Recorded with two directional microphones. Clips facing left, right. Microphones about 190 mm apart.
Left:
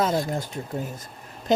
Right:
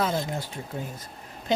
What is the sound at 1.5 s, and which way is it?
Speech, 45° left (ahead or behind).